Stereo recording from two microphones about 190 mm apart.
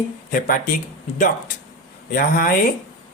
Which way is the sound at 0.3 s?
50° left (ahead or behind).